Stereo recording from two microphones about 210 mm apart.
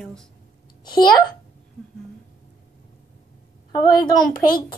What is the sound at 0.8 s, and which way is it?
Speech, 20° left (ahead or behind).